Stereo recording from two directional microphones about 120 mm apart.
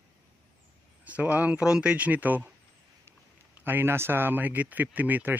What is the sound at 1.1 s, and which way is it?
Speech, 10° right (ahead or behind).